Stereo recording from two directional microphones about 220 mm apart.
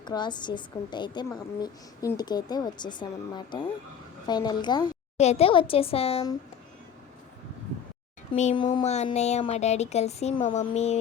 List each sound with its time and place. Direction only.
0.0 s a woman's voice: 20° left (ahead or behind)
5.1 s a woman's voice: 30° left (ahead or behind)
8.3 s speech: 25° left (ahead or behind)